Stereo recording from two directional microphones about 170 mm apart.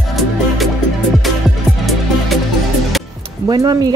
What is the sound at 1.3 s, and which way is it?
Music, centre (ahead or behind).